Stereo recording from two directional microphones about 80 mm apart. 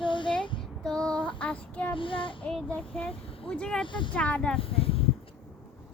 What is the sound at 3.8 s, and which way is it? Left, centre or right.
Speech, left.